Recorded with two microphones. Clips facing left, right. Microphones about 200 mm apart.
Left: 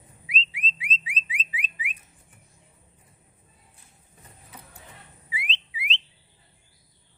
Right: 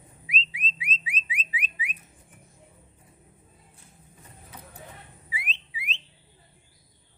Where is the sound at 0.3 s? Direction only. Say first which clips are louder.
Left 1 dB; 30° left (ahead or behind).